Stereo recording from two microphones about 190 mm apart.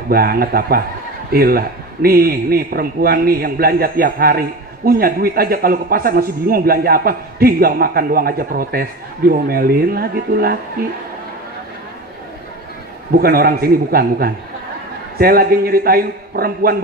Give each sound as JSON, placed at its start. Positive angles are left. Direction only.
{"t": 0.1, "sound": "a man's voice", "side_deg": -50}
{"t": 13.2, "sound": "a man's voice", "side_deg": -50}